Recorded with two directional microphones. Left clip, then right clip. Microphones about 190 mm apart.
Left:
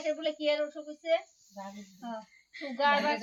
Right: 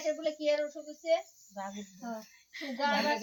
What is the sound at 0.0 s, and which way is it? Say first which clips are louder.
A woman's voice: left 1 dB; 10° right (ahead or behind).